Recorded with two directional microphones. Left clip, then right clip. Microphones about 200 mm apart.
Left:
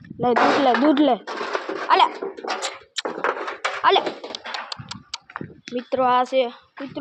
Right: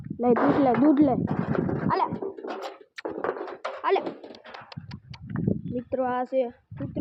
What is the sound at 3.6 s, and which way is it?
Dog, 5° right (ahead or behind).